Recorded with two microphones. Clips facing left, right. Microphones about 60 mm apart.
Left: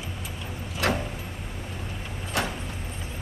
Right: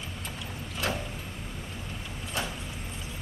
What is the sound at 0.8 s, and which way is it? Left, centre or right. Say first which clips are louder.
Vehicle: left 6 dB; left.